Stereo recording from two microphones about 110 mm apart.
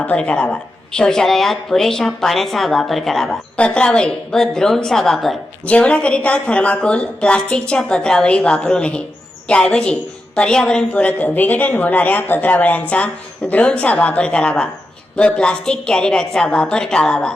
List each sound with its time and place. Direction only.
0.0 s a woman's voice: 15° left (ahead or behind)
5.6 s a woman's voice: 10° left (ahead or behind)